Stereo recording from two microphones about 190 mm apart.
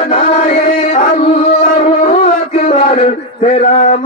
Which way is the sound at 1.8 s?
35° left (ahead or behind).